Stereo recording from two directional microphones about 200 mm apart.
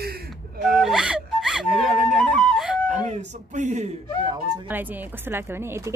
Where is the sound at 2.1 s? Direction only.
Centre (ahead or behind).